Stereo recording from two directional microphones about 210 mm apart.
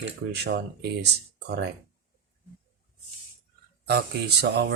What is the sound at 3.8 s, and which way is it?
Speech, 50° right (ahead or behind).